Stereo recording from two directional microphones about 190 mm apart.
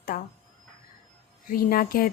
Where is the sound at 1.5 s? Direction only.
50° left (ahead or behind).